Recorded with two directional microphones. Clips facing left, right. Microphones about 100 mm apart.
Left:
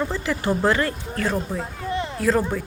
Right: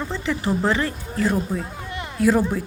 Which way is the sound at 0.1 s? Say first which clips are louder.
Even; 5° left (ahead or behind).